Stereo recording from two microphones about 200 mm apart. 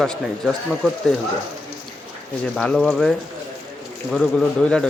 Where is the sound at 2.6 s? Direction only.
5° left (ahead or behind).